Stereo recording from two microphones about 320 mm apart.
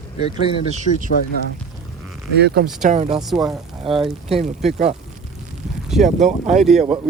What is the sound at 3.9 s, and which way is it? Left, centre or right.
Speech, centre.